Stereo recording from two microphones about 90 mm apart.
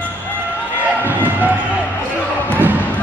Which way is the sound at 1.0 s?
20° right (ahead or behind).